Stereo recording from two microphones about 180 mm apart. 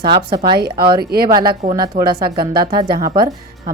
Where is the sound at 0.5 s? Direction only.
60° right (ahead or behind).